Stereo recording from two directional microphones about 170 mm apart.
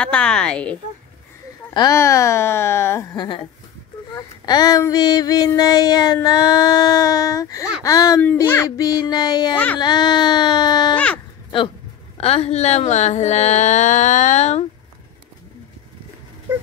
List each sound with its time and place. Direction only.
0.0 s a woman's voice: 5° left (ahead or behind)
1.7 s speech: 20° left (ahead or behind)
4.1 s child singing: 25° left (ahead or behind)
12.2 s speech: 35° left (ahead or behind)